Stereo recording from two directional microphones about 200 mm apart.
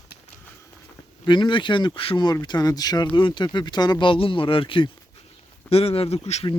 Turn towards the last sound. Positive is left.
turn(degrees=30)  # may be behind; listen again after turning